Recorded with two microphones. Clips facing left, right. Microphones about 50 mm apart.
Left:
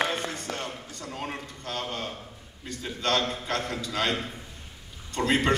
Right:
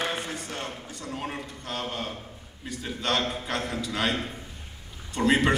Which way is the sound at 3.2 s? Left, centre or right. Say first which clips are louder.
Even; centre.